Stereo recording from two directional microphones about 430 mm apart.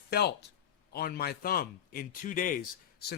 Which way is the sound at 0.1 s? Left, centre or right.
Left.